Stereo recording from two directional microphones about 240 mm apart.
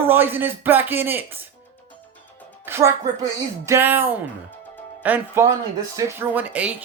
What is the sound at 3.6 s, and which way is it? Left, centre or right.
A man's voice, centre.